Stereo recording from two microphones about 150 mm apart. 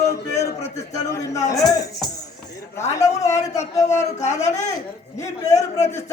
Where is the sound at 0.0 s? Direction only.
20° left (ahead or behind).